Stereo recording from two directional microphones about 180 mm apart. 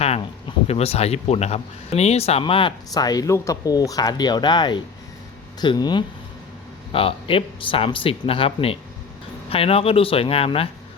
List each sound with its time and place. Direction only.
0.0 s speech: 30° left (ahead or behind)